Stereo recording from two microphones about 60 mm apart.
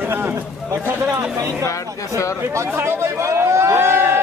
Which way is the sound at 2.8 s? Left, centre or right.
Right.